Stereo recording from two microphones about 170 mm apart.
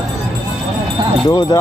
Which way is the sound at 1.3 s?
25° left (ahead or behind).